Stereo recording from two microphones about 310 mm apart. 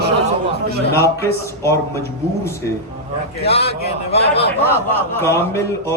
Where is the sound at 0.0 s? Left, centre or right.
Right.